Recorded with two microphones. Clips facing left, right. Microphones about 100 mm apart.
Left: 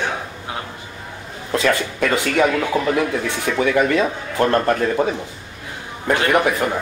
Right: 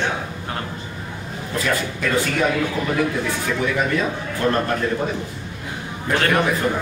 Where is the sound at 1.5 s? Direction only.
75° left (ahead or behind).